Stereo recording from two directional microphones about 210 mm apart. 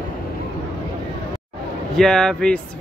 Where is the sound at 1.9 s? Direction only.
Centre (ahead or behind).